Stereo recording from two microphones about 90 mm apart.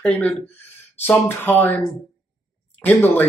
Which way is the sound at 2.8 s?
20° left (ahead or behind).